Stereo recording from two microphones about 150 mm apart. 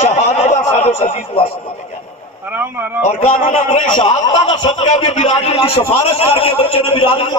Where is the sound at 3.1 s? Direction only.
40° left (ahead or behind).